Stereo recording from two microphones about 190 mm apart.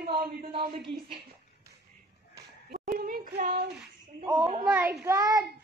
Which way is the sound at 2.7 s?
50° right (ahead or behind).